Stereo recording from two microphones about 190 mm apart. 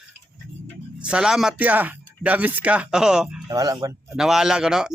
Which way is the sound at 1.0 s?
5° right (ahead or behind).